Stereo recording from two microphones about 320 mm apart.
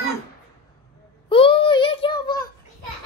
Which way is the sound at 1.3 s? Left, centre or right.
Centre.